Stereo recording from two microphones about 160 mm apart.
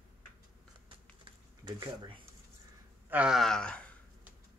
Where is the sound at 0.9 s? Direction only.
30° right (ahead or behind).